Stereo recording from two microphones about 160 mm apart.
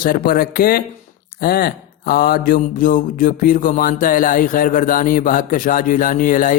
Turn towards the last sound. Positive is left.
turn(degrees=55)  # may be behind; listen again after turning